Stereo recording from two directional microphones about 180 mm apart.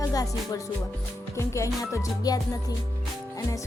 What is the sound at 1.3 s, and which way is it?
Music, 15° left (ahead or behind).